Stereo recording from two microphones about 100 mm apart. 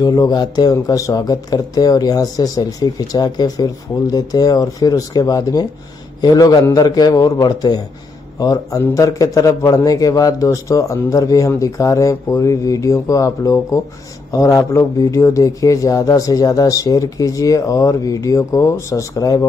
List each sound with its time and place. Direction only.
0.0 s a man's voice: 40° left (ahead or behind)